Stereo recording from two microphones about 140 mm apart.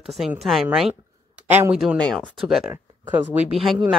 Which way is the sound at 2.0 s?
5° left (ahead or behind).